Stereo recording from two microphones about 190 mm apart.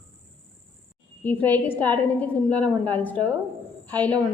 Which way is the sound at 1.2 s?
10° left (ahead or behind).